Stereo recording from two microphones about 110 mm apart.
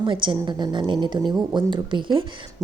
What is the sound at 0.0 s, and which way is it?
A woman's voice, 50° right (ahead or behind).